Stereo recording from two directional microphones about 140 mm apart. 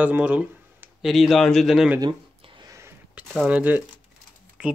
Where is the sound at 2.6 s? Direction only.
20° right (ahead or behind).